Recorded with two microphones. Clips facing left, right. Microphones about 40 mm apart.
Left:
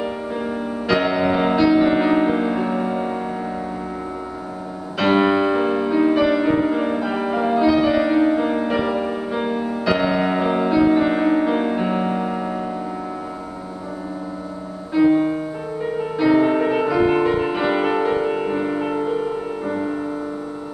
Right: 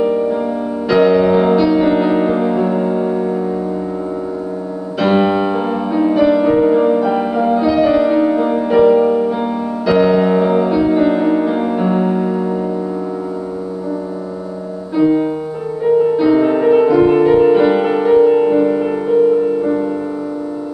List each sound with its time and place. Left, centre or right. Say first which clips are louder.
0.0 s music: right 10 dB; centre
4.9 s music: right 3 dB; centre
15.0 s music: right 2 dB; centre